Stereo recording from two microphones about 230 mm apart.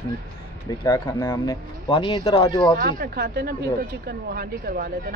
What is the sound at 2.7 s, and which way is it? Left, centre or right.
Speech, right.